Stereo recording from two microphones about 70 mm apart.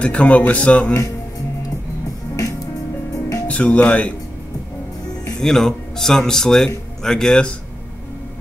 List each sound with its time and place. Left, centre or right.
0.0 s a man's voice: centre
2.3 s music: left
3.4 s speech: centre
5.4 s a man's voice: centre